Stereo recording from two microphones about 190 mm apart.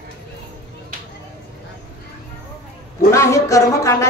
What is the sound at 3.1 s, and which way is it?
Speech, 15° left (ahead or behind).